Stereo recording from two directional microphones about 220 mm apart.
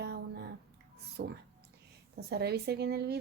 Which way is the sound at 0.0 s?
50° right (ahead or behind).